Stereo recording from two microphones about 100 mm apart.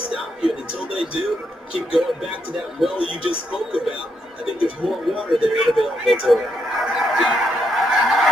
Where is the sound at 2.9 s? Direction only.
65° left (ahead or behind).